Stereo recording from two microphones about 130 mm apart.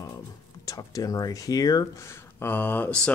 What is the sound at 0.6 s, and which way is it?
Speech, 25° left (ahead or behind).